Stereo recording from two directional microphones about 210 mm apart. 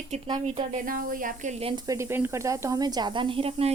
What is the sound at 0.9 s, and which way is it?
Speech, 40° right (ahead or behind).